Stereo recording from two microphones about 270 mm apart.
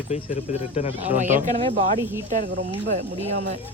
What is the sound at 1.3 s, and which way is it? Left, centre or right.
Speech, right.